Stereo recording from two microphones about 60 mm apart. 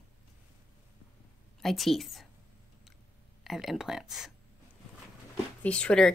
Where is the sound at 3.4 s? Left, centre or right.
Centre.